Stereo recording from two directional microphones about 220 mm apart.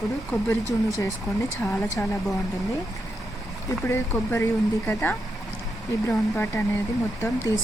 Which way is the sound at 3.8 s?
15° left (ahead or behind).